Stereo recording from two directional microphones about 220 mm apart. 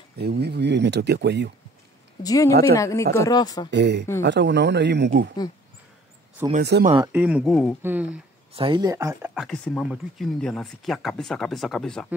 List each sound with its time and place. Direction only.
0.2 s speech: 45° right (ahead or behind)
2.2 s speech: 15° left (ahead or behind)
3.7 s speech: 50° right (ahead or behind)
6.6 s speech: 50° right (ahead or behind)
6.9 s speech: 20° right (ahead or behind)
7.2 s speech: 5° right (ahead or behind)
8.5 s speech: 20° right (ahead or behind)
9.3 s speech: centre (ahead or behind)